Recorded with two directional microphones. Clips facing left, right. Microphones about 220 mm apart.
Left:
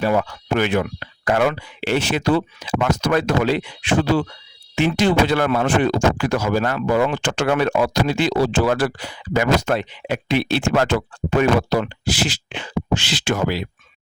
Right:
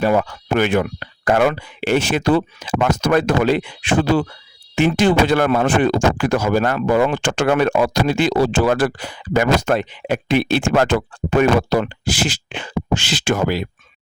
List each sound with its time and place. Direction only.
0.0 s speech: 50° right (ahead or behind)